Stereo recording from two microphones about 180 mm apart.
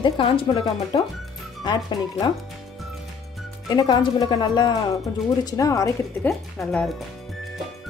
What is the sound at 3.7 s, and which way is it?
Speech, 25° left (ahead or behind).